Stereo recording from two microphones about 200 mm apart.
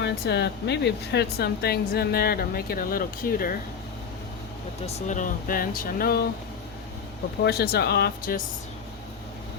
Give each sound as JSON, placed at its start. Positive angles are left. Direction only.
{"t": 0.0, "sound": "speech", "side_deg": 55}
{"t": 4.9, "sound": "speech", "side_deg": 40}
{"t": 7.4, "sound": "speech", "side_deg": 50}